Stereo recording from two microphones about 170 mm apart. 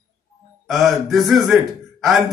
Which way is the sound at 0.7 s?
Centre (ahead or behind).